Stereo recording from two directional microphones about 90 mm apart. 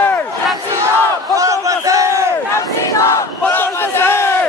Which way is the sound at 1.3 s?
35° right (ahead or behind).